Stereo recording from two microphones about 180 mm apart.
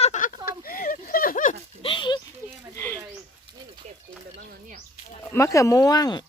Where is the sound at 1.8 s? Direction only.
25° left (ahead or behind).